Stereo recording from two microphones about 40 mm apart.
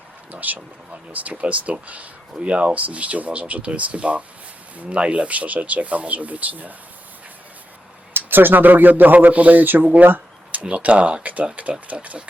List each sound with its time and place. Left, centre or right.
0.3 s speech: right
8.1 s speech: right
9.9 s a sound: right
10.6 s speech: right
11.6 s a sound: right
12.0 s speech: right